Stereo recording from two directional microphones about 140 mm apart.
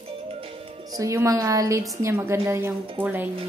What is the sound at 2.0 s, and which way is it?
Music, 15° right (ahead or behind).